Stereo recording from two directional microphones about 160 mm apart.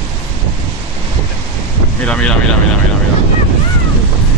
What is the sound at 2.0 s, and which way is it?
Speech, 5° left (ahead or behind).